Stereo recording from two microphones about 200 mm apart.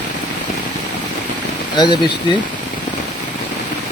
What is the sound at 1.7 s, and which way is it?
Speech, 20° left (ahead or behind).